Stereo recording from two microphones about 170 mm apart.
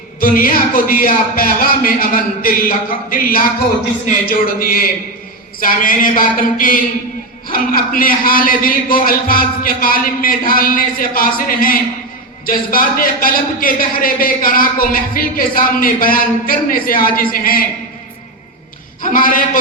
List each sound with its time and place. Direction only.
0.2 s speech: 55° left (ahead or behind)
19.1 s speech: 55° left (ahead or behind)